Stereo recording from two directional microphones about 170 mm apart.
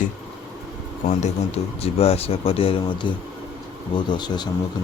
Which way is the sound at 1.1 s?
40° left (ahead or behind).